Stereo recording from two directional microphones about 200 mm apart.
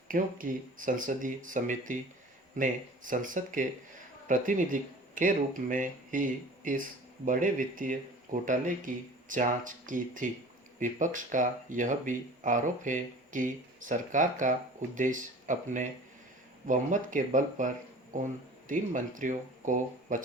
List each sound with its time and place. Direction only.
0.1 s speech: 45° right (ahead or behind)